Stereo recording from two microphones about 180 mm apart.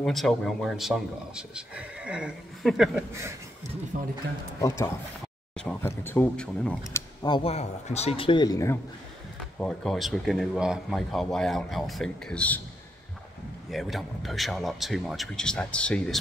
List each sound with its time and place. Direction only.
0.0 s speech: centre (ahead or behind)
3.9 s speech: 45° right (ahead or behind)
4.6 s speech: 15° left (ahead or behind)
6.9 s speech: 25° left (ahead or behind)
9.6 s speech: 5° left (ahead or behind)
13.7 s speech: centre (ahead or behind)